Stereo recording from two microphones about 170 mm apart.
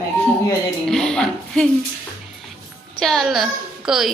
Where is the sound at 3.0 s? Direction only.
Centre (ahead or behind).